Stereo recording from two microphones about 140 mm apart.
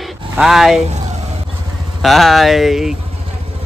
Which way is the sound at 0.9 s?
55° right (ahead or behind).